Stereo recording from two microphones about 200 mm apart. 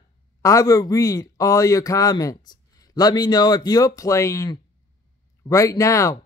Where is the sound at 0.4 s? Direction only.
15° left (ahead or behind).